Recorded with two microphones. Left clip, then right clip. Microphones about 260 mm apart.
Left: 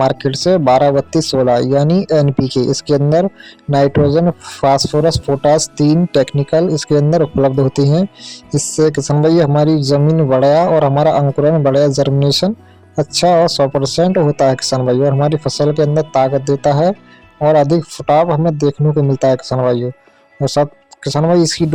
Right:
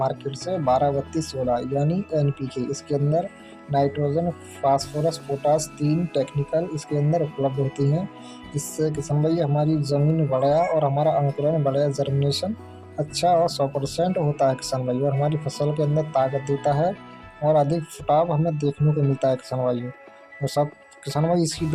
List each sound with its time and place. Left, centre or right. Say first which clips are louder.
0.0 s speech: left 12 dB; left